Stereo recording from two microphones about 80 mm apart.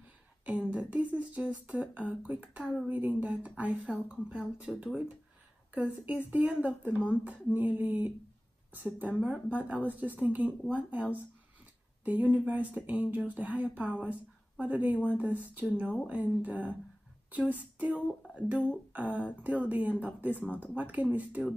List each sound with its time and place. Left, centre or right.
0.5 s speech: centre
18.9 s speech: centre